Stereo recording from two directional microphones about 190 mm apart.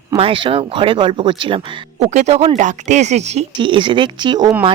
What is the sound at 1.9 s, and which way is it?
Speech, 35° right (ahead or behind).